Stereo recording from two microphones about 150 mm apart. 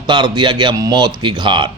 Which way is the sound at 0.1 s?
30° right (ahead or behind).